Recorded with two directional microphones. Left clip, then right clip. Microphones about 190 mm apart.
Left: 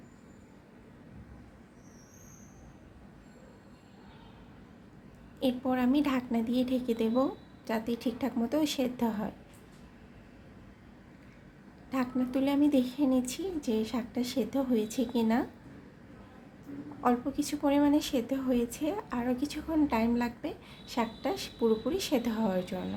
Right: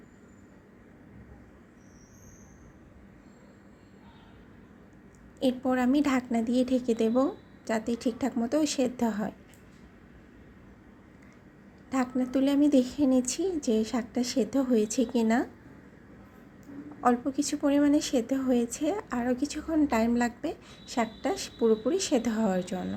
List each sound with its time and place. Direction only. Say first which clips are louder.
5.4 s a woman's voice: right 3 dB; 20° right (ahead or behind)
11.9 s a woman's voice: right 3 dB; 20° right (ahead or behind)
17.0 s a woman's voice: right 3 dB; 15° right (ahead or behind)